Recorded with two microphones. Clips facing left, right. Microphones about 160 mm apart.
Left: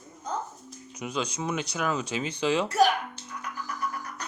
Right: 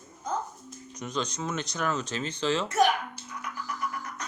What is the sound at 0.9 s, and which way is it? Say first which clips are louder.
Speech: left 1 dB; 10° left (ahead or behind).